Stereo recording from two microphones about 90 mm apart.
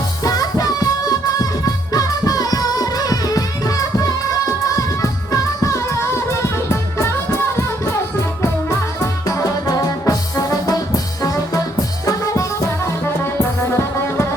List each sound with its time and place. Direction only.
0.2 s music: 40° left (ahead or behind)
9.2 s music: 40° left (ahead or behind)